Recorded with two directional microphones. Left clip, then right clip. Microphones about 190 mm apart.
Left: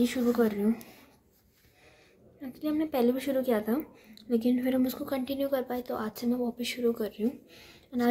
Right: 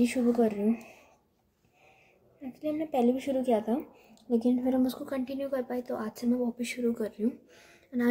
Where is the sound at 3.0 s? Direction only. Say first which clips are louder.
Right 1 dB; 35° left (ahead or behind).